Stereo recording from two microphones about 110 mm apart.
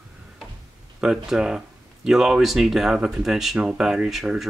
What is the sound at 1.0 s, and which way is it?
Speech, 5° right (ahead or behind).